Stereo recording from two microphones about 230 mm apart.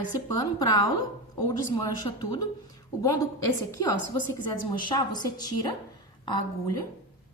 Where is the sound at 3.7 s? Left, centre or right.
Centre.